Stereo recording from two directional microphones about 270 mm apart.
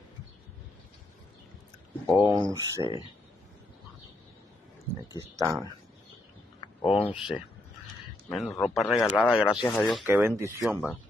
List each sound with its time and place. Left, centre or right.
2.0 s speech: centre
2.8 s speech: centre
5.1 s speech: centre
6.8 s speech: centre
7.1 s speech: centre